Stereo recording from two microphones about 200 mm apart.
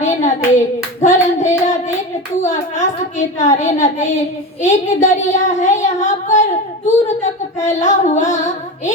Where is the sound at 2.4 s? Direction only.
40° left (ahead or behind).